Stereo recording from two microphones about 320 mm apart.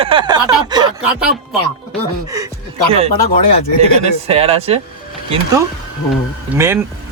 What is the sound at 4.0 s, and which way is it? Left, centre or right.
Speech, centre.